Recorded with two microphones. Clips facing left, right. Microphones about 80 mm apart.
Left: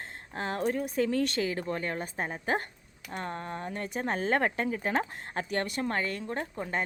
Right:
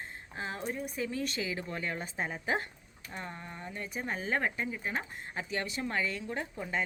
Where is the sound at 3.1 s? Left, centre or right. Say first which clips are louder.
Left 7 dB; left.